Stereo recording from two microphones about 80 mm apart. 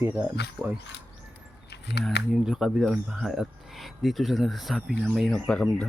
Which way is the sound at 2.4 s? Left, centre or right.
Centre.